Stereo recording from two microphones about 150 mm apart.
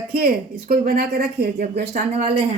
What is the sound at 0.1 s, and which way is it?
A woman's voice, 90° right.